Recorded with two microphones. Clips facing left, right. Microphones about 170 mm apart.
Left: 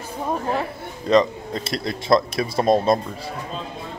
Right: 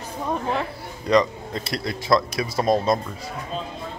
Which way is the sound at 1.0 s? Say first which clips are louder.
Left 2 dB; 25° left (ahead or behind).